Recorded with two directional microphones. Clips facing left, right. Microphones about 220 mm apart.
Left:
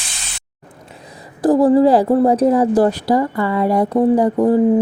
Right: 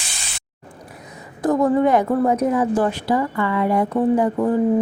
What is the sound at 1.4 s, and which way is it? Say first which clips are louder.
A woman's voice: left 5 dB; 30° left (ahead or behind).